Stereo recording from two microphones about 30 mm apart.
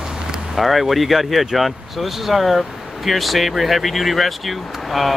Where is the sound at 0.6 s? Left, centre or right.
Centre.